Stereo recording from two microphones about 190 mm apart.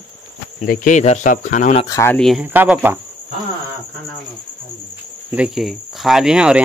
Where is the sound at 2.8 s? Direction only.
10° right (ahead or behind).